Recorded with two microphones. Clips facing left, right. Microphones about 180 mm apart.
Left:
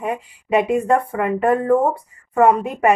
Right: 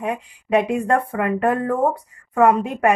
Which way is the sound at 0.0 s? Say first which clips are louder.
Left 1 dB; centre (ahead or behind).